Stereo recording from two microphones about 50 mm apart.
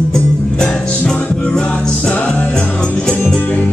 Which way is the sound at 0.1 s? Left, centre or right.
Centre.